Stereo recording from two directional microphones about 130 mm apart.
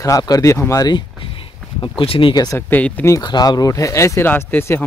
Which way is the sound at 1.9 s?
40° left (ahead or behind).